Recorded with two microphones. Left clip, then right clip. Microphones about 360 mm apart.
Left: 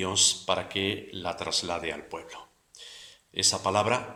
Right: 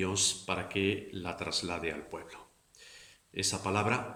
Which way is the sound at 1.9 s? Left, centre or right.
Centre.